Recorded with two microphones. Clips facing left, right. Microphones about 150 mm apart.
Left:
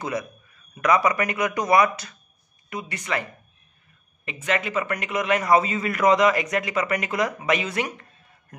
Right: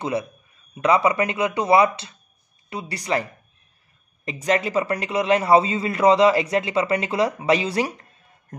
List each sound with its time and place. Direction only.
0.0 s a man's voice: 25° right (ahead or behind)